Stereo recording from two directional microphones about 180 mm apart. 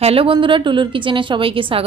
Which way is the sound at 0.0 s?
30° right (ahead or behind).